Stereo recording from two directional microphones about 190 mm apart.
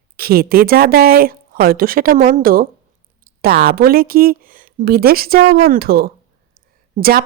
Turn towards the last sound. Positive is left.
turn(degrees=-50)  # may be behind; listen again after turning